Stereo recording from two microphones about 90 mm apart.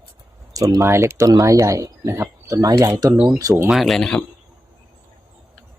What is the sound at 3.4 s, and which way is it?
Speech, 40° right (ahead or behind).